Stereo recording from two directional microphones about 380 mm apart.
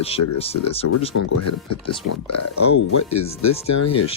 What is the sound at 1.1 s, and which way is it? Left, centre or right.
Speech, left.